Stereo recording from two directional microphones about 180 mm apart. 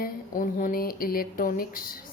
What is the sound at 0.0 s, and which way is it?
A woman's voice, 50° left (ahead or behind).